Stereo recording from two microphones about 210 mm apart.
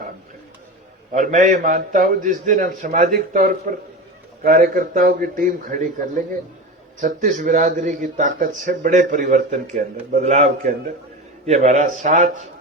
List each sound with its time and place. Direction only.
1.1 s a man's voice: 40° right (ahead or behind)